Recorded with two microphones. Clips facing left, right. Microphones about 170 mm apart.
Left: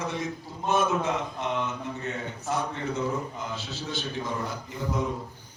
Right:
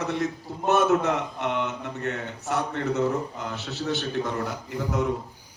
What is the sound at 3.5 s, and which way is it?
Speech, 65° right (ahead or behind).